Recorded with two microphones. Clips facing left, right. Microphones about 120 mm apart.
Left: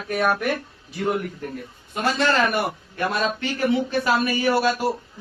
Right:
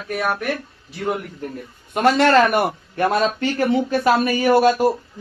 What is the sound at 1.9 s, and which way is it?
A man's voice, 65° right (ahead or behind).